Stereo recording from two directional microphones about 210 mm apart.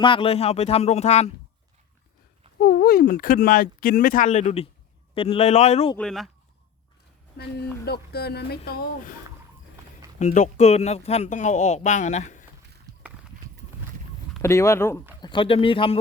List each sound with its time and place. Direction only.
0.0 s speech: 25° left (ahead or behind)
2.6 s speech: 45° left (ahead or behind); by 5.9 s 30° left (ahead or behind)
6.0 s speech: centre (ahead or behind)
7.3 s speech: 50° left (ahead or behind)
10.2 s speech: 35° left (ahead or behind)
12.9 s a sound: 15° right (ahead or behind)
14.4 s speech: 15° left (ahead or behind)
15.2 s speech: 20° left (ahead or behind)